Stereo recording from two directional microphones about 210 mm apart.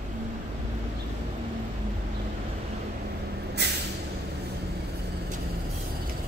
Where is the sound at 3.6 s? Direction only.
50° right (ahead or behind).